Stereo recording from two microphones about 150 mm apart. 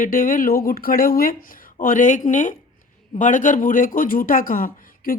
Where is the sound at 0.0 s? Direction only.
65° left (ahead or behind).